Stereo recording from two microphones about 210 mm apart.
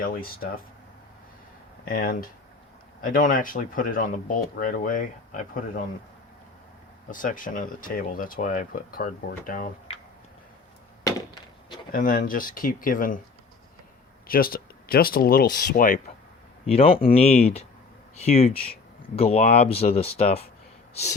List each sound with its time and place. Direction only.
0.0 s speech: 45° left (ahead or behind)
1.9 s speech: 45° left (ahead or behind)
7.1 s speech: 40° left (ahead or behind)
11.9 s speech: 40° left (ahead or behind)
14.3 s speech: 45° left (ahead or behind)
16.6 s speech: 25° left (ahead or behind)